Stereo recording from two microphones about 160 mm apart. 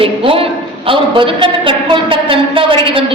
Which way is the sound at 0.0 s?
35° right (ahead or behind).